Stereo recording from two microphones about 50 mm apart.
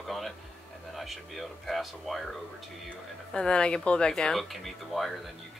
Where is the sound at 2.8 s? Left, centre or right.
Centre.